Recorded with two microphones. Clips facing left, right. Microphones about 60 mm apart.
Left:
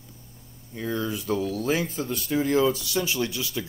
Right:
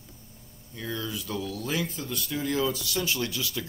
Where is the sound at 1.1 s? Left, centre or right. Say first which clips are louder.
Left 6 dB; left.